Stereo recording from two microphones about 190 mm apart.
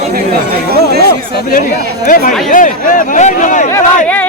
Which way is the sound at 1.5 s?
45° left (ahead or behind).